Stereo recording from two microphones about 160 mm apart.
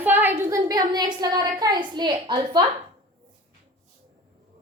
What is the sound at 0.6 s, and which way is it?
A woman's voice, 25° right (ahead or behind).